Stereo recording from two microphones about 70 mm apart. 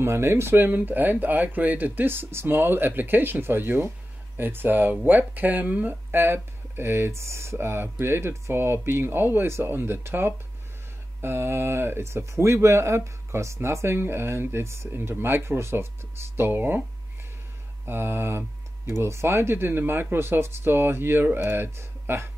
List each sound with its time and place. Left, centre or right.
0.0 s speech: right
17.8 s speech: right